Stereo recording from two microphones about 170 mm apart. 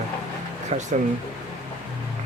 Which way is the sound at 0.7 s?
45° right (ahead or behind).